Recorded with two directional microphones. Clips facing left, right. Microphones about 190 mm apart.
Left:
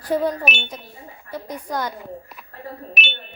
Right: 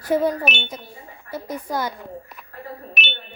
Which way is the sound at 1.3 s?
5° right (ahead or behind).